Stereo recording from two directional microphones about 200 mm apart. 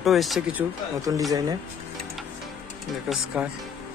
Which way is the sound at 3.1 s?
5° right (ahead or behind).